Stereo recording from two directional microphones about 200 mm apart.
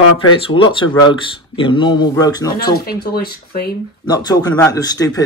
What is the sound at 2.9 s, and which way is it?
Speech, 50° left (ahead or behind).